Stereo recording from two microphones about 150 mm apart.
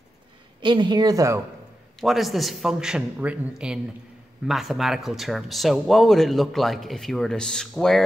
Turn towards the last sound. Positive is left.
turn(degrees=5)  # may be behind; listen again after turning